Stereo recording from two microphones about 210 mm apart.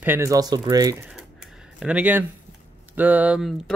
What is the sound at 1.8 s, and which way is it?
Speech, 5° right (ahead or behind).